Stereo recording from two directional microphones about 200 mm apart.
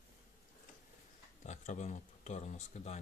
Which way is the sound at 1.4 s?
35° left (ahead or behind).